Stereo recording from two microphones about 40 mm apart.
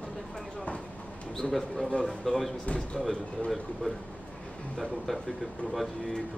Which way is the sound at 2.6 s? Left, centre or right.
Left.